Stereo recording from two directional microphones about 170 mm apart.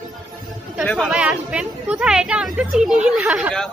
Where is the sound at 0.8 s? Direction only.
Centre (ahead or behind).